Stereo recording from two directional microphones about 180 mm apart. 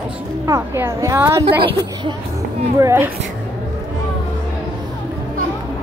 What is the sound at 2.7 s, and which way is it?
Speech, 15° right (ahead or behind).